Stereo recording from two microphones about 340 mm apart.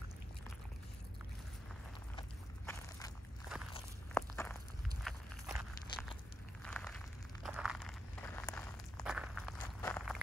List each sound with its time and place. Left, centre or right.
2.1 s walk: centre
4.1 s biting: centre
5.0 s a sound: centre
9.8 s walk: centre